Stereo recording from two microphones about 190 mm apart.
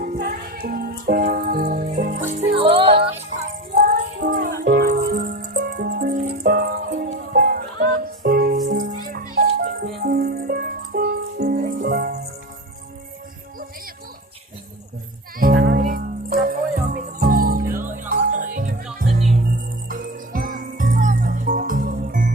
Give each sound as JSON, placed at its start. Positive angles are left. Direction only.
{"t": 0.0, "sound": "music", "side_deg": -50}
{"t": 2.5, "sound": "music", "side_deg": -30}
{"t": 3.8, "sound": "music", "side_deg": -50}
{"t": 9.3, "sound": "music", "side_deg": -55}
{"t": 15.5, "sound": "music", "side_deg": -65}
{"t": 15.8, "sound": "music", "side_deg": -45}